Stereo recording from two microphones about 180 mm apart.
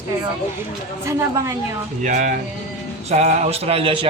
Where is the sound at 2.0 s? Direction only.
45° right (ahead or behind); by 4.1 s 30° right (ahead or behind).